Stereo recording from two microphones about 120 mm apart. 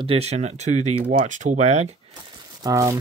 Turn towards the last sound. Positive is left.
turn(degrees=-25)  # may be behind; listen again after turning